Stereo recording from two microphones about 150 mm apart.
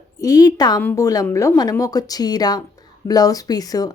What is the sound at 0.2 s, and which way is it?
Speech, 25° left (ahead or behind).